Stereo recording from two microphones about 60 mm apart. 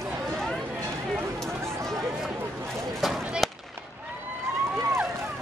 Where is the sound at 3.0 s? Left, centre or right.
Centre.